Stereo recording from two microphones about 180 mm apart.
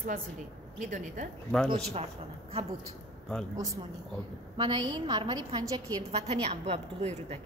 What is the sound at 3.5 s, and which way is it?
A woman's voice, 20° right (ahead or behind).